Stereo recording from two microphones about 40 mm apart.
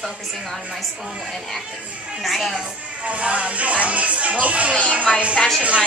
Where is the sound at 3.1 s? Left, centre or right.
Right.